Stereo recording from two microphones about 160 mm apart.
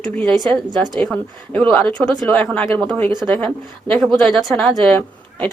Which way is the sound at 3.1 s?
25° right (ahead or behind).